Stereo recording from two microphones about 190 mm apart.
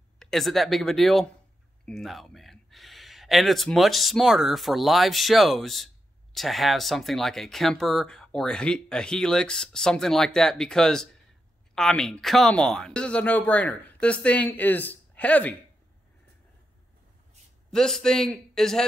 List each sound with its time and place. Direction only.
0.2 s speech: centre (ahead or behind)
17.6 s speech: 5° left (ahead or behind)